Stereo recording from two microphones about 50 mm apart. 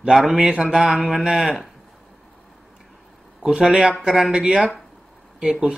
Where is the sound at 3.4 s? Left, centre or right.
Centre.